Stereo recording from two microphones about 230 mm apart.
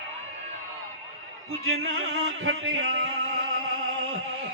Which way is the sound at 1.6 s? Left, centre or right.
Right.